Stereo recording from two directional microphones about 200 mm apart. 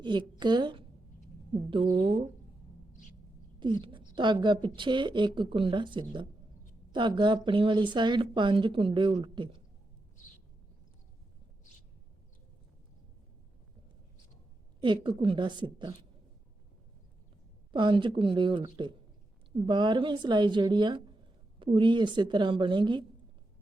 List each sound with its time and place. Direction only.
0.0 s a woman's voice: 20° right (ahead or behind)
2.0 s a woman's voice: 25° right (ahead or behind)
3.6 s a woman's voice: 25° right (ahead or behind)
14.8 s a woman's voice: 25° right (ahead or behind)
17.7 s a woman's voice: 25° right (ahead or behind)